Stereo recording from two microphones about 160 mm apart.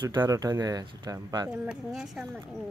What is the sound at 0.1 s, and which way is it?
Speech, 25° right (ahead or behind).